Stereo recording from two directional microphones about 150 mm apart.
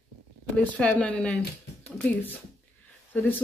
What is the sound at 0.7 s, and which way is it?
A woman's voice, 10° left (ahead or behind).